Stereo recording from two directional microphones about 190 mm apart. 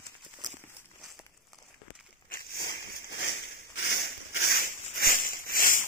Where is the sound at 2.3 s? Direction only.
55° left (ahead or behind).